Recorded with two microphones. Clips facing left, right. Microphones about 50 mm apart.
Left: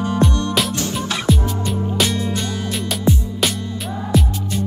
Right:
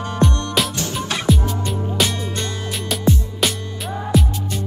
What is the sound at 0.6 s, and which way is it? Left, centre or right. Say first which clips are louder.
Music: left 1 dB; centre.